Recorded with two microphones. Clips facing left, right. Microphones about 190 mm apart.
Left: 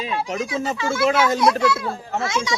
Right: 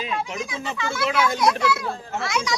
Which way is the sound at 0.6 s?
45° left (ahead or behind).